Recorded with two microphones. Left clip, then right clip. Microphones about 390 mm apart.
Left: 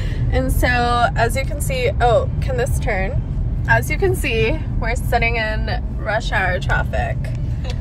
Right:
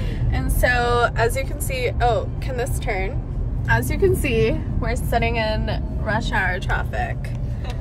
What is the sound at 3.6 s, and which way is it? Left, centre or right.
Speech, centre.